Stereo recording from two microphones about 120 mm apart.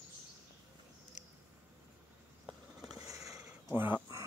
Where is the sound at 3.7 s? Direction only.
15° right (ahead or behind).